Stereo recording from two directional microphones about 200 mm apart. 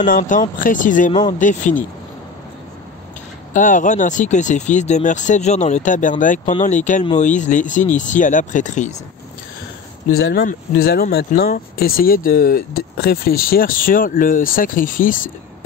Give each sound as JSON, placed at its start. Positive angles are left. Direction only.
{"t": 0.0, "sound": "speech", "side_deg": 40}
{"t": 3.5, "sound": "speech", "side_deg": 40}
{"t": 10.1, "sound": "speech", "side_deg": 50}